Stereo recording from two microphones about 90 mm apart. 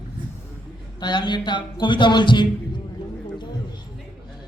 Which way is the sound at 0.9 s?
55° left (ahead or behind).